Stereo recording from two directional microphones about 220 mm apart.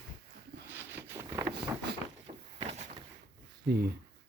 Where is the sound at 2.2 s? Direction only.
30° right (ahead or behind).